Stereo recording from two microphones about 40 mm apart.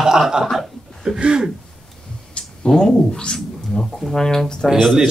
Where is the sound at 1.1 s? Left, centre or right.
Right.